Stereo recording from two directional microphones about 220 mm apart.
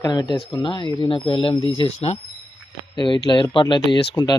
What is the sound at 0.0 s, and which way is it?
Speech, 20° left (ahead or behind).